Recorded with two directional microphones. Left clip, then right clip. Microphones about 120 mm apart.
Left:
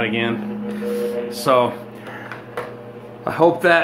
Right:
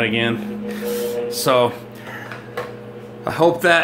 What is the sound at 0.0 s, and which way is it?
Speech, 35° right (ahead or behind).